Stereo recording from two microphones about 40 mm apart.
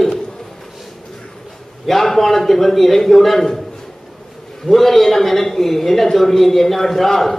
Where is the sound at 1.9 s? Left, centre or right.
Centre.